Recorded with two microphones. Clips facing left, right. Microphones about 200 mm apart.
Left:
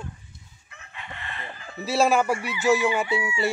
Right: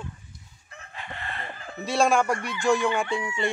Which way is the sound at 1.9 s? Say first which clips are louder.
Left 1 dB; 5° left (ahead or behind).